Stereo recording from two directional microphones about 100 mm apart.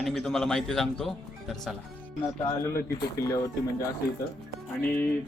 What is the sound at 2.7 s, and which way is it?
Speech, 30° left (ahead or behind).